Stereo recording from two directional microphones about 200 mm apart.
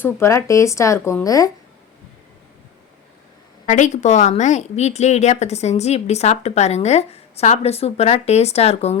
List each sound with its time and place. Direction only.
0.0 s speech: 15° left (ahead or behind)
3.7 s a woman's voice: 35° left (ahead or behind)